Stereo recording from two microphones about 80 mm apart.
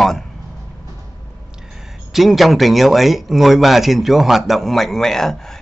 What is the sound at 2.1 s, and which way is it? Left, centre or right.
Speech, centre.